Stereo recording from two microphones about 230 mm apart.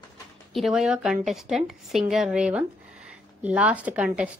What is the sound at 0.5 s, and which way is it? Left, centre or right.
A woman's voice, centre.